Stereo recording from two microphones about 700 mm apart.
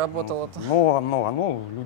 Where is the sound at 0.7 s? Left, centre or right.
Left.